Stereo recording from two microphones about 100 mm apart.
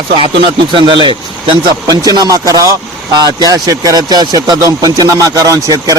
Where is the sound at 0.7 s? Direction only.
55° right (ahead or behind).